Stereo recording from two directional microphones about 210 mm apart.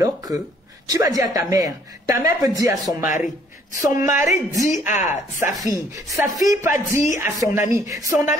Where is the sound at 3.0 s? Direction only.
35° left (ahead or behind).